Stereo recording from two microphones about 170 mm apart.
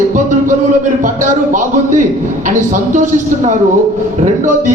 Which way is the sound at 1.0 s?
50° right (ahead or behind).